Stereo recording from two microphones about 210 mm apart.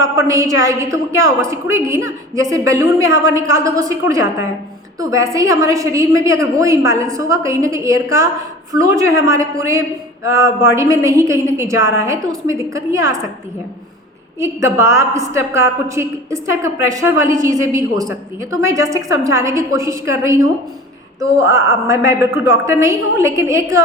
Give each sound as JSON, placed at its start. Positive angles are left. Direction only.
{"t": 0.0, "sound": "a woman's voice", "side_deg": -15}
{"t": 14.3, "sound": "a woman's voice", "side_deg": -15}